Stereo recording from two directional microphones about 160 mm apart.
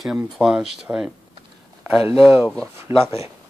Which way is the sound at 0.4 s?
5° right (ahead or behind).